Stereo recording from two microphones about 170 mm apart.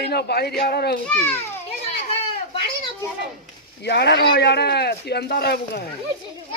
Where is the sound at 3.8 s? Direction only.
75° left (ahead or behind).